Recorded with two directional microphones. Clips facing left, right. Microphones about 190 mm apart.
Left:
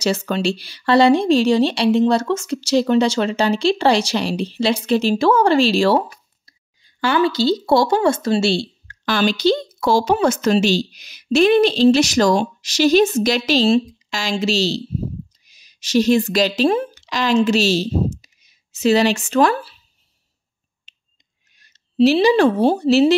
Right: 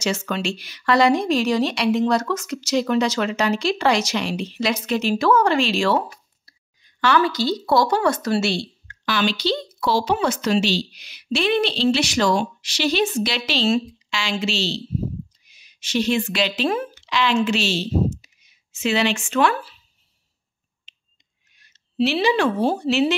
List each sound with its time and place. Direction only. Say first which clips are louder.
0.0 s speech: left 5 dB; 35° left (ahead or behind)
6.4 s a sound: left 1 dB; 30° left (ahead or behind)
7.2 s speech: left 7 dB; 30° left (ahead or behind)
9.0 s speech: left 5 dB; 45° left (ahead or behind)
20.9 s finger snapping: even; 45° left (ahead or behind)
21.5 s a woman's voice: left 6 dB; 40° left (ahead or behind)